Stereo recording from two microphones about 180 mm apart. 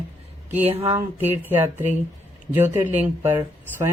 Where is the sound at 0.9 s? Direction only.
15° right (ahead or behind).